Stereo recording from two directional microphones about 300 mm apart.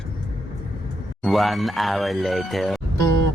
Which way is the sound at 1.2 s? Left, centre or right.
Centre.